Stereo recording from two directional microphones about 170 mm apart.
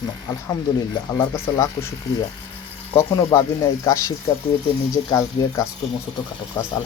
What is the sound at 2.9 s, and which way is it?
Speech, 15° left (ahead or behind).